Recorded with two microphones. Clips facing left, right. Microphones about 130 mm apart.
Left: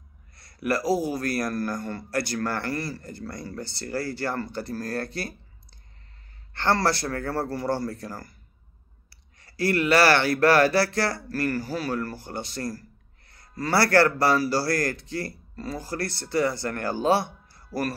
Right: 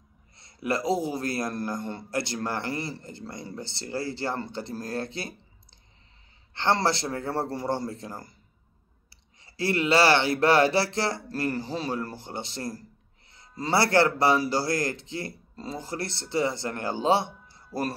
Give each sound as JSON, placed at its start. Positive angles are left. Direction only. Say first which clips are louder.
{"t": 0.4, "sound": "a man's voice", "louder": "left 2 dB", "side_deg": -20}
{"t": 6.5, "sound": "a man's voice", "louder": "left 1 dB", "side_deg": -20}
{"t": 9.4, "sound": "a man's voice", "louder": "left 2 dB", "side_deg": -25}